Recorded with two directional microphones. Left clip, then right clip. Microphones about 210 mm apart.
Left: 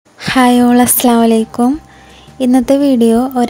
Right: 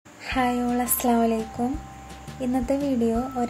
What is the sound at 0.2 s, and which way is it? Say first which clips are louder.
A woman's voice: left 14 dB; 50° left (ahead or behind).